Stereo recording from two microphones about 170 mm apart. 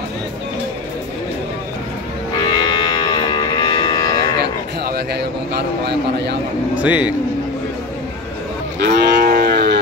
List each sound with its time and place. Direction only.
2.4 s moo: 25° left (ahead or behind)
4.8 s a man's voice: 70° right (ahead or behind)
6.7 s a man's voice: 10° right (ahead or behind)
8.7 s moo: 80° right